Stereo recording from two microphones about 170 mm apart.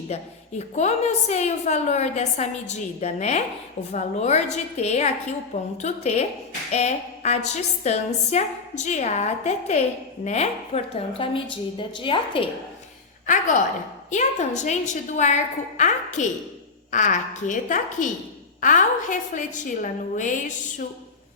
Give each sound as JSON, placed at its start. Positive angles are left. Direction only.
{"t": 0.1, "sound": "a woman's voice", "side_deg": 40}
{"t": 13.2, "sound": "a woman's voice", "side_deg": 50}